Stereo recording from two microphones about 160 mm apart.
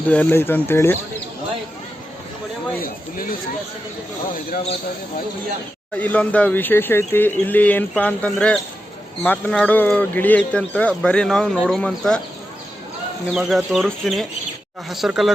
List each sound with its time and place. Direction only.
0.1 s speech: 10° left (ahead or behind)
2.8 s a sound: 60° left (ahead or behind)
6.0 s speech: 10° left (ahead or behind)
13.3 s speech: centre (ahead or behind)